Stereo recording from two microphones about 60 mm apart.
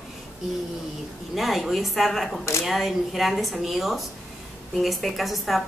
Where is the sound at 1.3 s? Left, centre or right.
Centre.